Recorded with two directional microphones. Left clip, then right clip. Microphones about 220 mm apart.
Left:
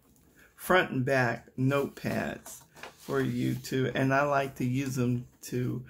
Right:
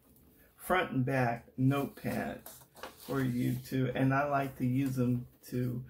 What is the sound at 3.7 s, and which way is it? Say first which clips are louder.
Speech: left 5 dB; 45° left (ahead or behind).